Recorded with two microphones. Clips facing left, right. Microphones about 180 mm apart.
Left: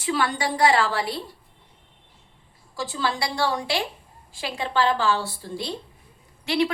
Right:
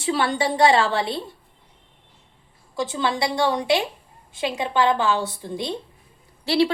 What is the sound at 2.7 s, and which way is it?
Speech, 20° right (ahead or behind).